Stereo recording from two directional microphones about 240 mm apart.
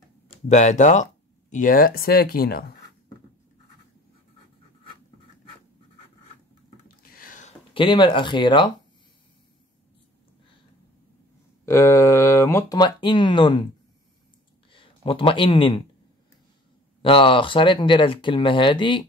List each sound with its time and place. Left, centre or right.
0.5 s speech: left
7.1 s a sound: left; by 8.7 s centre
11.6 s speech: centre
14.7 s speech: left
17.0 s speech: left